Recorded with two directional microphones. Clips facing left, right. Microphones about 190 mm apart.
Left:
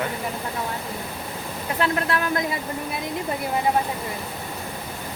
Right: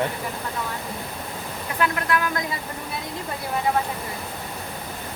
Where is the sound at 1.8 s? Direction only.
30° left (ahead or behind).